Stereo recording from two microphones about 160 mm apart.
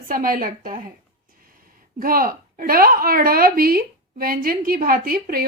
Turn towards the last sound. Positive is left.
turn(degrees=-70)  # may be behind; listen again after turning